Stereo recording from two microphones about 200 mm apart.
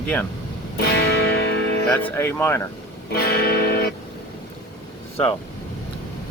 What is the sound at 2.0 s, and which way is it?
Speech, 10° left (ahead or behind).